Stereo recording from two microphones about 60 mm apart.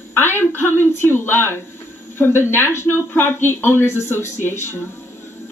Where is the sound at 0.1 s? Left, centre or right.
Left.